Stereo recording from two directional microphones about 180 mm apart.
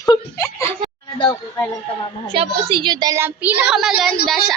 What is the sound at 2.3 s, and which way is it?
A woman's voice, 30° right (ahead or behind).